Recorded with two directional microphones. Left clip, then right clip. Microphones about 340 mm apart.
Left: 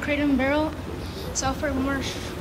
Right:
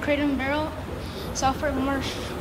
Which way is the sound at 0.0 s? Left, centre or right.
Centre.